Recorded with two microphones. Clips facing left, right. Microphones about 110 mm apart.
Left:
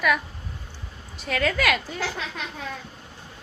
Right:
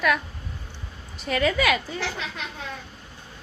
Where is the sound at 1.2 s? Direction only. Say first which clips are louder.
Right 2 dB; 5° right (ahead or behind).